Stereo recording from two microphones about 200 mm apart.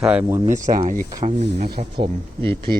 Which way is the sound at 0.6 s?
40° right (ahead or behind).